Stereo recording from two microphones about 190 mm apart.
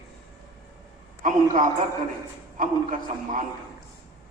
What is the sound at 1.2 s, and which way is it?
A man's voice, 40° right (ahead or behind).